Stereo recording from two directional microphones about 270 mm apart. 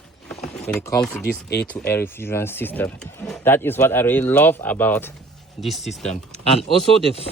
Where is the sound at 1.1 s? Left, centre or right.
Left.